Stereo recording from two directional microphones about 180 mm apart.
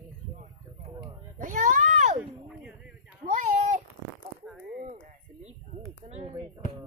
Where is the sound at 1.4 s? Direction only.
45° right (ahead or behind).